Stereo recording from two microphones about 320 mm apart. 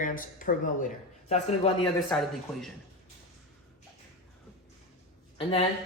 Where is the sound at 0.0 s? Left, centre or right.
Left.